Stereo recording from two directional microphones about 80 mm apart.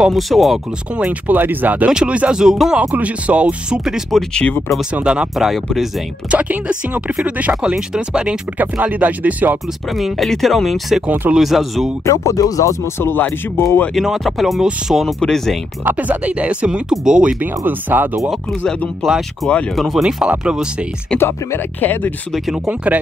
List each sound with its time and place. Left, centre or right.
0.0 s speech: centre
0.9 s speech: centre
1.9 s speech: centre
3.8 s speech: centre
4.3 s speech: centre
4.9 s speech: centre
6.3 s speech: centre
9.8 s speech: centre
12.0 s speech: left
13.9 s speech: centre
15.8 s speech: right
19.0 s speech: centre
21.2 s speech: left